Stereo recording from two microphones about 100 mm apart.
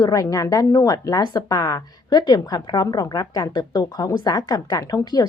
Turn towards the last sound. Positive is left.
turn(degrees=40)  # may be behind; listen again after turning